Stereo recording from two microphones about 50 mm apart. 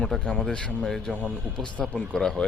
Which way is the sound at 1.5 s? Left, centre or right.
Centre.